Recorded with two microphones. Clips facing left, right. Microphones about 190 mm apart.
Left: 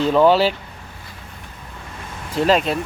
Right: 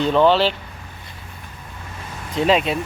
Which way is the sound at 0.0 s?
5° left (ahead or behind).